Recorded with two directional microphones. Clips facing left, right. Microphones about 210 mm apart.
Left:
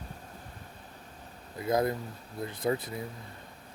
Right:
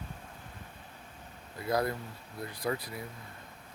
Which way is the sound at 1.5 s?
20° left (ahead or behind).